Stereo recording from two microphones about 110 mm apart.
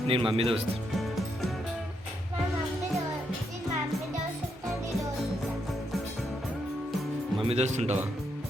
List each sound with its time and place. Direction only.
0.1 s speech: 55° right (ahead or behind)
7.4 s speech: 80° right